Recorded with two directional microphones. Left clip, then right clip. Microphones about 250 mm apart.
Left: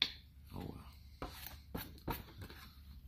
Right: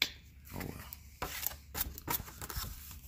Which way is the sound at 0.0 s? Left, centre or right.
Centre.